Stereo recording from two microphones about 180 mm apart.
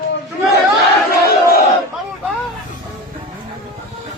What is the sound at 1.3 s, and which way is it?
Battle cry, 60° left (ahead or behind).